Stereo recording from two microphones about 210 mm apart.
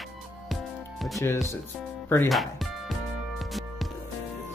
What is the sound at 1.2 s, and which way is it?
Music, 10° left (ahead or behind).